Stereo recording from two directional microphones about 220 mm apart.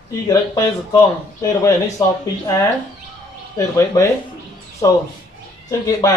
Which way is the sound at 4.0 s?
15° left (ahead or behind).